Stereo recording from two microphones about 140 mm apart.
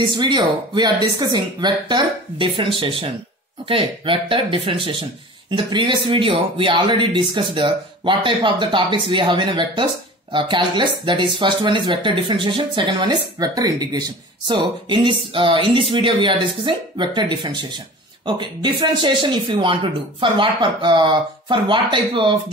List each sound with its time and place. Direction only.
0.2 s speech: 30° right (ahead or behind)